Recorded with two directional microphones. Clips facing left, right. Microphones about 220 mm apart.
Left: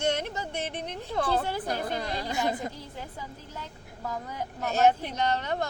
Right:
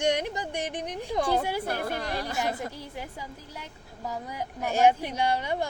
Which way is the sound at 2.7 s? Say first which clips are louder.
Right 2 dB; 10° right (ahead or behind).